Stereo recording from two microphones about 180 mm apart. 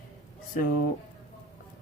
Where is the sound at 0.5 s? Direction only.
50° left (ahead or behind).